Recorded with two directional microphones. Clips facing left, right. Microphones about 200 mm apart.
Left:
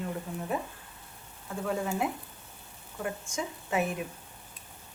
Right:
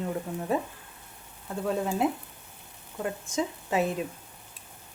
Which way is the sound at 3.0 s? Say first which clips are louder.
Right 4 dB; 20° right (ahead or behind).